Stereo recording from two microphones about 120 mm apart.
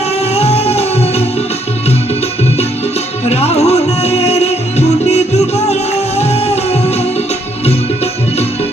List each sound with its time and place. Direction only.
0.3 s music: 60° left (ahead or behind)
3.2 s music: 60° left (ahead or behind)